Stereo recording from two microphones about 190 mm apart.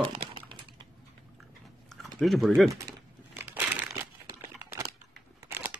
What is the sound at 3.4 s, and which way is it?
Crumpling, 10° right (ahead or behind).